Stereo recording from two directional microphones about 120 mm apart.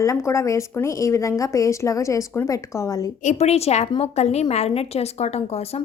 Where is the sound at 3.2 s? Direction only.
75° left (ahead or behind).